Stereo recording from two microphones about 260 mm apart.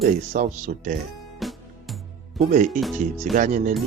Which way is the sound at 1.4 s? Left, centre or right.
Centre.